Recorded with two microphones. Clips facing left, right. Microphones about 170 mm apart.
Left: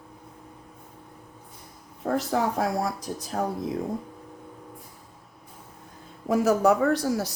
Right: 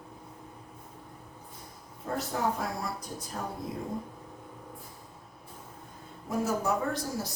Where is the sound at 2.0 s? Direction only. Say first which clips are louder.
Left 8 dB; 90° left.